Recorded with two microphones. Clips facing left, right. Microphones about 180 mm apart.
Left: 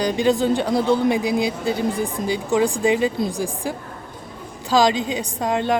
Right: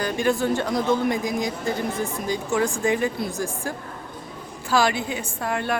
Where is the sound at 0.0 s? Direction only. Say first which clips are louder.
Left 4 dB; 15° left (ahead or behind).